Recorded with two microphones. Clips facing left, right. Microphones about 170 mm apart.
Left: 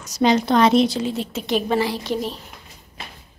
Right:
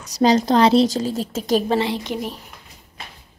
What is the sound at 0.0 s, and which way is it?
A woman's voice, 35° right (ahead or behind).